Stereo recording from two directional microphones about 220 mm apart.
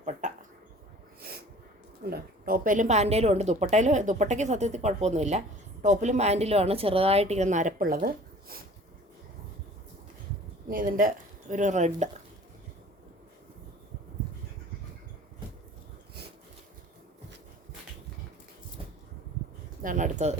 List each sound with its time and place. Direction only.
0.0 s a sound: 35° right (ahead or behind)
2.0 s speech: 45° right (ahead or behind)
10.7 s speech: 40° right (ahead or behind)
19.8 s speech: 35° right (ahead or behind)